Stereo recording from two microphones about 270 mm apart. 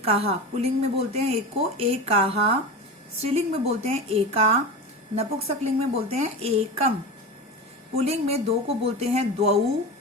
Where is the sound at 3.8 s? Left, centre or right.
Right.